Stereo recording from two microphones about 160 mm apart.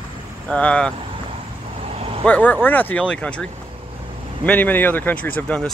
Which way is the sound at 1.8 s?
40° right (ahead or behind).